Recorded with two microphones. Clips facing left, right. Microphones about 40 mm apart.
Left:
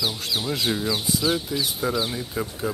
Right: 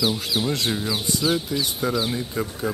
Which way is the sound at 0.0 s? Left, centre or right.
Centre.